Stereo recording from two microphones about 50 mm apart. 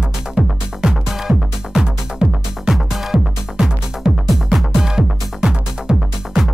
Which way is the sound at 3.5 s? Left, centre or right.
Centre.